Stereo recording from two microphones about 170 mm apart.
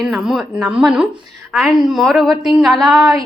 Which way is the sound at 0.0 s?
Centre (ahead or behind).